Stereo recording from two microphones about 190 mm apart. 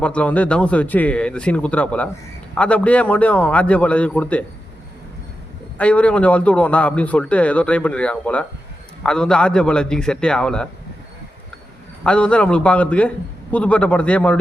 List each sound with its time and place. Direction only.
0.0 s a man's voice: 5° left (ahead or behind)
5.7 s a man's voice: 5° left (ahead or behind)
12.0 s a man's voice: 5° left (ahead or behind)